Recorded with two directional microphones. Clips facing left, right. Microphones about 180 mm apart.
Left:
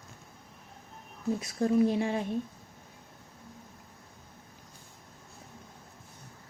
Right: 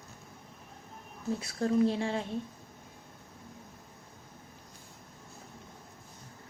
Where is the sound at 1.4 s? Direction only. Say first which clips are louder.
Left 1 dB; 15° left (ahead or behind).